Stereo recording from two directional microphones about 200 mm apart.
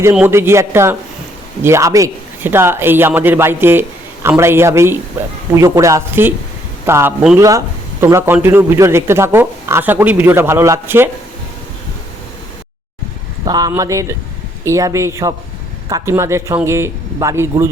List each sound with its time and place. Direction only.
0.0 s a man's voice: 10° right (ahead or behind)
13.4 s a man's voice: 20° right (ahead or behind)